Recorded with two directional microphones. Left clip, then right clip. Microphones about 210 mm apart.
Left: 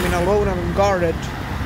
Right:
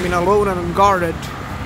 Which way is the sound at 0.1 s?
35° right (ahead or behind).